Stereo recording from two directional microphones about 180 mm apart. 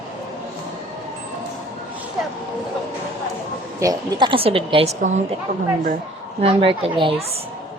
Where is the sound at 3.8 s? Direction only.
25° right (ahead or behind); by 5.1 s 40° right (ahead or behind).